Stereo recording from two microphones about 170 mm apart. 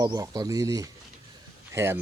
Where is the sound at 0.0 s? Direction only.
20° right (ahead or behind).